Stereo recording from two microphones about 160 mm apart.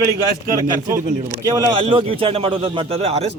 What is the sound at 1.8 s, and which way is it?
Speech, 35° right (ahead or behind).